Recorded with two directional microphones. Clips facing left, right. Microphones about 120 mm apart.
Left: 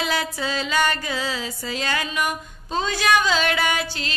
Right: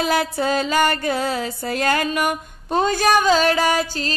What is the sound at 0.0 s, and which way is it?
Music, 45° right (ahead or behind).